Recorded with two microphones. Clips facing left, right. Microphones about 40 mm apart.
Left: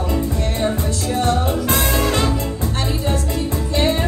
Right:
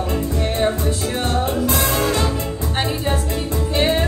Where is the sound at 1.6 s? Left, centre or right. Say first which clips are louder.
Even; left.